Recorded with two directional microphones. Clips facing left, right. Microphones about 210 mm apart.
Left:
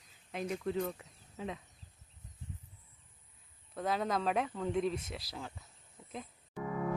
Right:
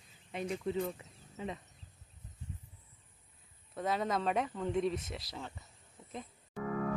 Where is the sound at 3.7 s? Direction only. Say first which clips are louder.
Even; centre (ahead or behind).